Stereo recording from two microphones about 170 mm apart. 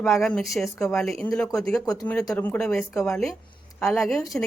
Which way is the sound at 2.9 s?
15° left (ahead or behind).